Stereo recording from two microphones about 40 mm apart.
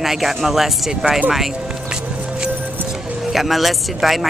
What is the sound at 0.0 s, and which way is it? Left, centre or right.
Speech, centre.